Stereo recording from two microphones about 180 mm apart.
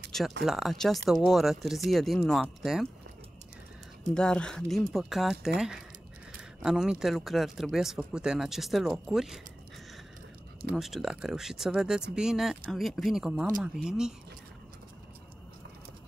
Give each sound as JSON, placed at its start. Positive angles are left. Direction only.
{"t": 0.1, "sound": "speech", "side_deg": 0}
{"t": 4.1, "sound": "speech", "side_deg": 5}
{"t": 10.8, "sound": "speech", "side_deg": 0}